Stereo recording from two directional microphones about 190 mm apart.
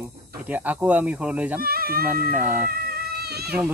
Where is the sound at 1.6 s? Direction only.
50° right (ahead or behind).